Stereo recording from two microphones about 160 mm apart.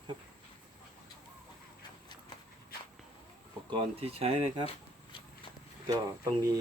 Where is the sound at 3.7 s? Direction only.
40° right (ahead or behind).